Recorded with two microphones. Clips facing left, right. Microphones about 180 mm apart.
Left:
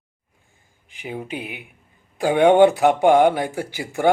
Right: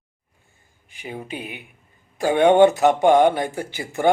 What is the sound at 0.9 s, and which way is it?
Speech, 10° left (ahead or behind).